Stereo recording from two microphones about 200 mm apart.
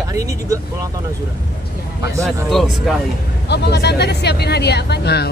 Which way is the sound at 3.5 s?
55° left (ahead or behind).